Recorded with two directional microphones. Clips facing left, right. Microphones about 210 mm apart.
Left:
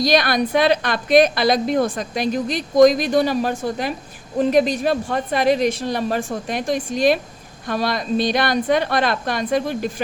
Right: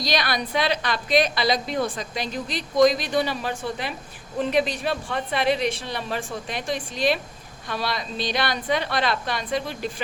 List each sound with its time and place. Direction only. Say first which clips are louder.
0.0 s a woman's voice: left 8 dB; 50° left (ahead or behind)